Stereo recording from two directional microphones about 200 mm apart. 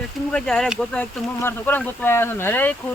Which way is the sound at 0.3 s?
5° left (ahead or behind).